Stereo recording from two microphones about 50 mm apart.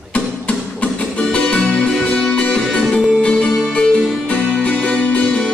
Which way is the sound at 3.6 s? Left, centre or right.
Left.